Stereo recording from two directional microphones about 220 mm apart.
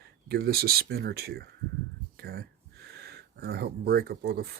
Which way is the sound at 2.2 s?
45° right (ahead or behind).